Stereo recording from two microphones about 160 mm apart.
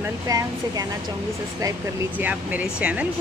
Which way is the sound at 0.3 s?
20° right (ahead or behind).